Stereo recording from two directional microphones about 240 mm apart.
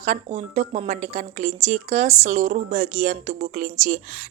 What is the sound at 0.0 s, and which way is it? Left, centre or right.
Speech, right.